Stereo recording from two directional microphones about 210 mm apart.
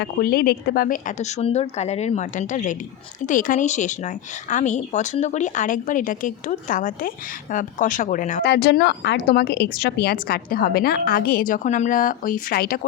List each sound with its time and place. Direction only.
0.0 s speech: 45° left (ahead or behind)
8.4 s speech: 50° left (ahead or behind)